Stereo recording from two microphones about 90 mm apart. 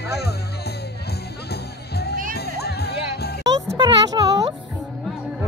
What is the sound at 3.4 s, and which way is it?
Music, 45° right (ahead or behind).